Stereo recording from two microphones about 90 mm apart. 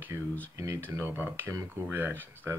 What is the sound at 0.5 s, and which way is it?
Speech, 35° right (ahead or behind).